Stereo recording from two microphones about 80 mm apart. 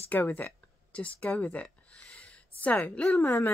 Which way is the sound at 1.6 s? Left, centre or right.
Centre.